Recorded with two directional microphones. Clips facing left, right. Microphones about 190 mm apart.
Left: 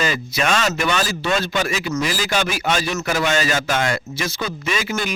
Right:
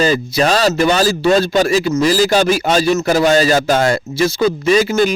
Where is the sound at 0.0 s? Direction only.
35° right (ahead or behind).